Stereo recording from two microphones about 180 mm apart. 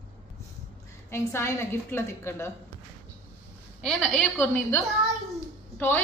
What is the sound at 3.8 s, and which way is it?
Speech, 5° left (ahead or behind).